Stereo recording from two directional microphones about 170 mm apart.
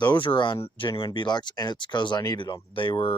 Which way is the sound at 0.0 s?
25° left (ahead or behind).